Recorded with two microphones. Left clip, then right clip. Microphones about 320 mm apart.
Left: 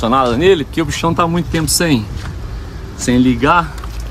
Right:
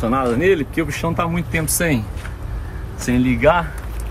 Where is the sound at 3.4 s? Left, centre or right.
Centre.